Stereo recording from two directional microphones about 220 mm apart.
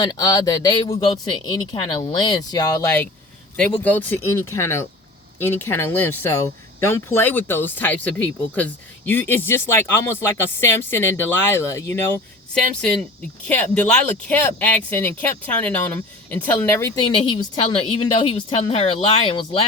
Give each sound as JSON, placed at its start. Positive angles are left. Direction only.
{"t": 0.0, "sound": "speech", "side_deg": 15}
{"t": 13.5, "sound": "speech", "side_deg": 5}